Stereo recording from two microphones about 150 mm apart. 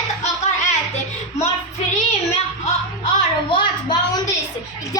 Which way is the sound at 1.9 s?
45° left (ahead or behind).